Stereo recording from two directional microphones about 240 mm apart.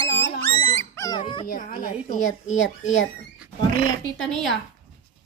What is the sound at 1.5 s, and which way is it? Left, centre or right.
Speech, left.